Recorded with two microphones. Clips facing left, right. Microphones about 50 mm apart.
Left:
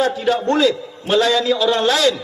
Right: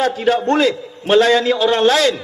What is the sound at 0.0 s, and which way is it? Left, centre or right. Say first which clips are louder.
A man's voice: right 1 dB; right.